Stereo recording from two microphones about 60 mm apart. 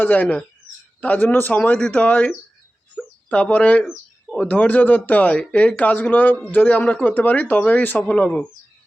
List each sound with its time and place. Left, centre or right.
0.0 s speech: left
2.9 s bird: left
4.4 s speech: left
8.0 s speech: centre